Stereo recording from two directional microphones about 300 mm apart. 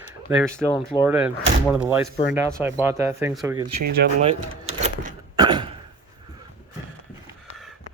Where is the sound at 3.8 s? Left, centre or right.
Right.